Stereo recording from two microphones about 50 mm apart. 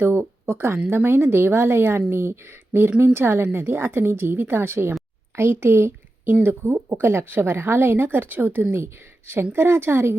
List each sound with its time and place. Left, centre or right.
0.0 s speech: right
8.8 s speech: right